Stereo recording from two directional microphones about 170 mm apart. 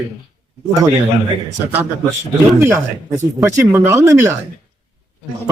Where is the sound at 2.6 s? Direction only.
15° right (ahead or behind).